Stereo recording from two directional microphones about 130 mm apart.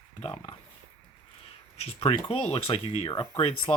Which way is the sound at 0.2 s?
45° left (ahead or behind).